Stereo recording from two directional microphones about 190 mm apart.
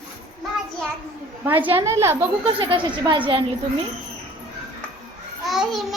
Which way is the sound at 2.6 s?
25° right (ahead or behind).